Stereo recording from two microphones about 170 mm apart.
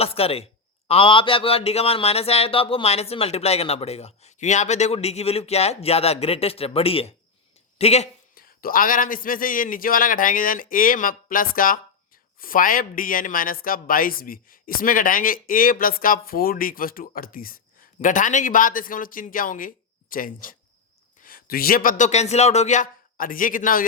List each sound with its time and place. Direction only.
0.0 s speech: 35° left (ahead or behind)
8.4 s a man's voice: 60° left (ahead or behind)